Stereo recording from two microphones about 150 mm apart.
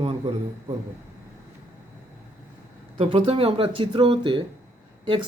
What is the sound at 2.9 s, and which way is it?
A man's voice, 40° right (ahead or behind).